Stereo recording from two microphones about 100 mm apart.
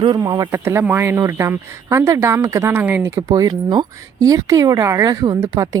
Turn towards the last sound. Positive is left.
turn(degrees=-40)  # may be behind; listen again after turning